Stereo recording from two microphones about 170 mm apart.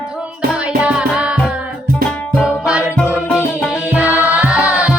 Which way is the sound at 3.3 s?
10° left (ahead or behind).